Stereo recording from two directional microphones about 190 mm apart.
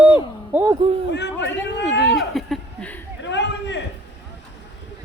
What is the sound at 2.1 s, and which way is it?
Chuckle, centre (ahead or behind).